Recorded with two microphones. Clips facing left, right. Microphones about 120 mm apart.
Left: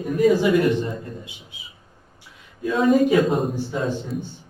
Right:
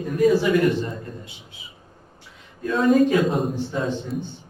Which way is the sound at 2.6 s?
Centre (ahead or behind).